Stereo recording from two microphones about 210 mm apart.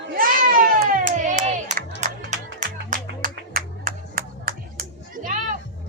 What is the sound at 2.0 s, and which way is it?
Music, 35° right (ahead or behind).